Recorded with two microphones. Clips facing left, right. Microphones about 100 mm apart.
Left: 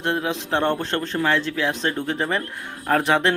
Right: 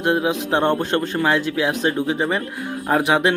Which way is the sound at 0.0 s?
15° right (ahead or behind).